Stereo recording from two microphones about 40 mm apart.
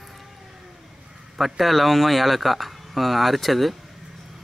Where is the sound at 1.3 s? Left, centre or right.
Centre.